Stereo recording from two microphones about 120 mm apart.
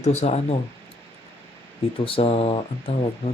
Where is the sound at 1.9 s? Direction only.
50° left (ahead or behind).